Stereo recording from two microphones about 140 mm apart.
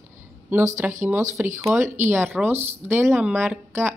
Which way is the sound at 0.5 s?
15° right (ahead or behind).